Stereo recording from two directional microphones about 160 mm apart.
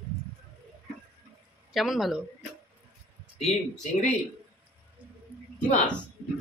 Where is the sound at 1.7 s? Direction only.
Centre (ahead or behind).